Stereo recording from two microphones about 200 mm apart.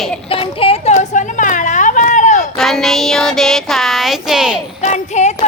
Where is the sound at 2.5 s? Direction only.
Centre (ahead or behind).